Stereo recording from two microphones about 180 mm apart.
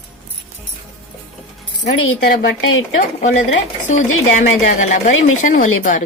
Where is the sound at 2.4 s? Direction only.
90° left.